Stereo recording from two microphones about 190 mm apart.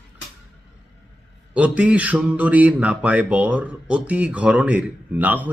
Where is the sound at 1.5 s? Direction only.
5° right (ahead or behind).